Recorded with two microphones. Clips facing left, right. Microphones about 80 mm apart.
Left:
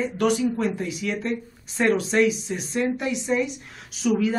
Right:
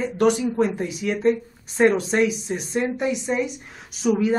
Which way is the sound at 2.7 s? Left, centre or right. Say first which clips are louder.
Right 1 dB; centre.